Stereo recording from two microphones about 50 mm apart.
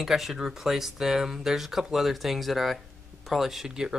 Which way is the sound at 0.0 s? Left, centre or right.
Centre.